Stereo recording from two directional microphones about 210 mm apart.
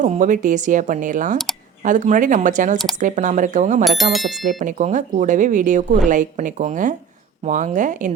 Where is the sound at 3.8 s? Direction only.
Centre (ahead or behind).